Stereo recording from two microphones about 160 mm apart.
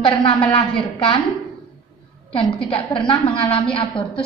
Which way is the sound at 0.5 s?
30° left (ahead or behind).